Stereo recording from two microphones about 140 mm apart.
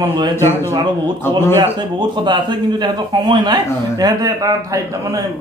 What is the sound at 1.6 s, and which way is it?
A man's voice, 35° right (ahead or behind).